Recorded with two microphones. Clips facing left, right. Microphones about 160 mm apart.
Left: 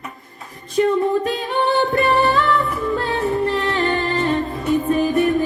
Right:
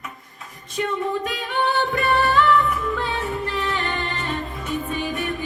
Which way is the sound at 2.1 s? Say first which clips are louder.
Left 1 dB; 35° left (ahead or behind).